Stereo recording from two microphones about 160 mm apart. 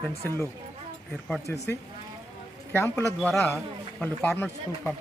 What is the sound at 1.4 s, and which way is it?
Speech, 15° left (ahead or behind).